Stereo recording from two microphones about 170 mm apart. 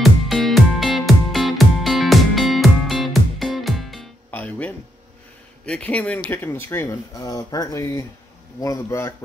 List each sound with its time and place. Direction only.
0.0 s music: centre (ahead or behind)
5.7 s speech: 5° left (ahead or behind)